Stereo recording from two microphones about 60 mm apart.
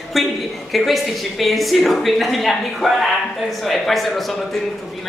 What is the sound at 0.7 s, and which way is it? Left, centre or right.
A woman's voice, centre.